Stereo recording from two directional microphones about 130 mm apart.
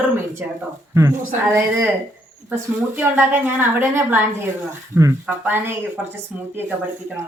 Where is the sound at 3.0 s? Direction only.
15° right (ahead or behind).